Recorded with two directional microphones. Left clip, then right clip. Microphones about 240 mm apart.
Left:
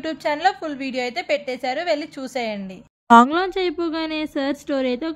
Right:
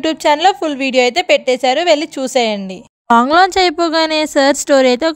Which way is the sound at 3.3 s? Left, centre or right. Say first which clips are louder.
Right 12 dB; right.